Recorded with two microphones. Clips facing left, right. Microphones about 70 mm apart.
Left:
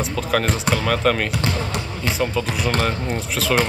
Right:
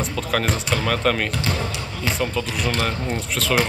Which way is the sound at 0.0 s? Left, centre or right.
Centre.